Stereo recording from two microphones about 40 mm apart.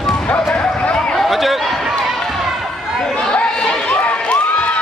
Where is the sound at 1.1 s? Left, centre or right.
Centre.